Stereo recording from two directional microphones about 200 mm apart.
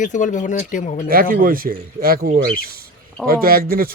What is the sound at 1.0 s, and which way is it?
Speech, 45° right (ahead or behind).